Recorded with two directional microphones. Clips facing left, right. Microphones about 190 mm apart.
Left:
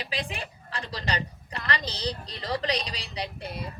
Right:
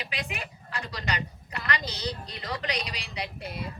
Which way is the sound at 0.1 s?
30° left (ahead or behind).